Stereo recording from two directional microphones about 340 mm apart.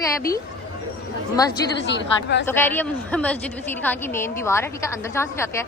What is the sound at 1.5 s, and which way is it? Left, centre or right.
Speech, left.